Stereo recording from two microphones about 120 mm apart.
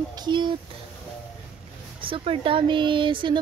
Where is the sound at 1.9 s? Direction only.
45° right (ahead or behind).